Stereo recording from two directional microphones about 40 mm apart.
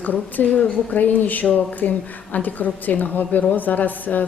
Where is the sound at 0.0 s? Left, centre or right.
Left.